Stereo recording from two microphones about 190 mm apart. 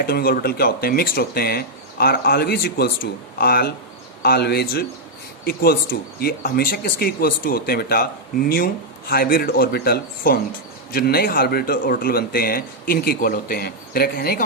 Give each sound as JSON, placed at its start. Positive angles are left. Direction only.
{"t": 0.0, "sound": "speech", "side_deg": 50}